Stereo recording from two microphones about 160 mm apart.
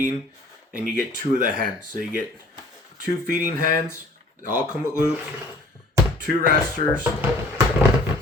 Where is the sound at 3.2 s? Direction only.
55° right (ahead or behind).